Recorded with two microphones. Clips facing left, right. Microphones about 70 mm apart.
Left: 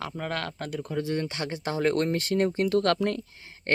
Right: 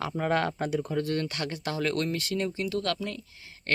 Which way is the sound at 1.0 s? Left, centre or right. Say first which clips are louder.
Even; centre.